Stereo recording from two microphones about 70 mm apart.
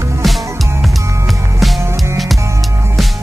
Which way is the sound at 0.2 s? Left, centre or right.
Centre.